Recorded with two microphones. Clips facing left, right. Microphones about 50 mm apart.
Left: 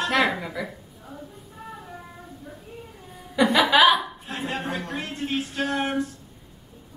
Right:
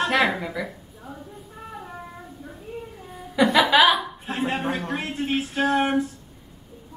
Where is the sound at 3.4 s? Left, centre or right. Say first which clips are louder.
Right 1 dB; centre.